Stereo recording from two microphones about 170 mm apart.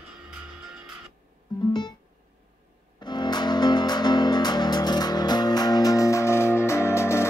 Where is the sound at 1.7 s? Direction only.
25° left (ahead or behind).